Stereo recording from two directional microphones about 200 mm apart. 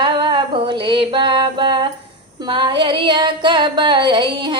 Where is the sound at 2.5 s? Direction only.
25° right (ahead or behind).